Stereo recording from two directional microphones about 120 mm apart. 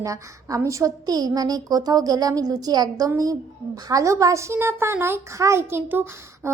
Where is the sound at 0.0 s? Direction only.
25° right (ahead or behind).